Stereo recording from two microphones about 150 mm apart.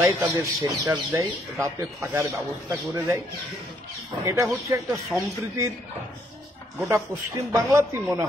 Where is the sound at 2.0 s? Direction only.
15° right (ahead or behind).